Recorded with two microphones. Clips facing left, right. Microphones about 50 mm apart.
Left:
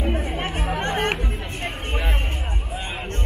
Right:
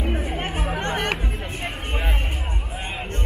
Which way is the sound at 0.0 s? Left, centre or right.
Centre.